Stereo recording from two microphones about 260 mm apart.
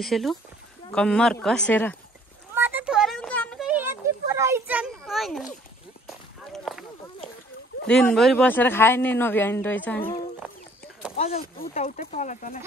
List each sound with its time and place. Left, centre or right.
0.0 s speech: centre
2.5 s a sound: centre
7.8 s speech: centre
11.1 s speech: left